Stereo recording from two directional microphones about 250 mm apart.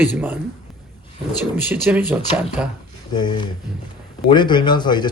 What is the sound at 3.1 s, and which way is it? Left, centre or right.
Speech, centre.